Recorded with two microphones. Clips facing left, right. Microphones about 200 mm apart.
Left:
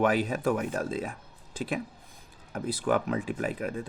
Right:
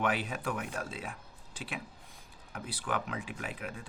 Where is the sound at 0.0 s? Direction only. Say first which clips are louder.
Left 8 dB; 40° left (ahead or behind).